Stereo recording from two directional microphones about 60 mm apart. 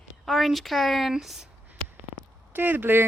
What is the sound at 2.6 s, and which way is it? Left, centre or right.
Speech, right.